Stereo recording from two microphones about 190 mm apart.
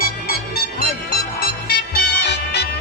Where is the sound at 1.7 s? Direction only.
60° left (ahead or behind).